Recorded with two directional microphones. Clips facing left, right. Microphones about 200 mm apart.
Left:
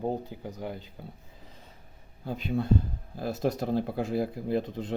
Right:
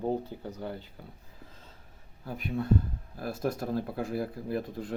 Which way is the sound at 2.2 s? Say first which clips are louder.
Left 2 dB; 25° left (ahead or behind).